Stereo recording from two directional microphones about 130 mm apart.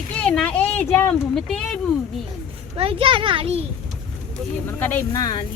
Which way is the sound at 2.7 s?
45° right (ahead or behind).